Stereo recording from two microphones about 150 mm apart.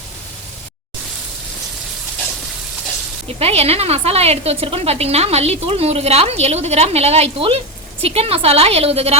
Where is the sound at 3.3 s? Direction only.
45° right (ahead or behind).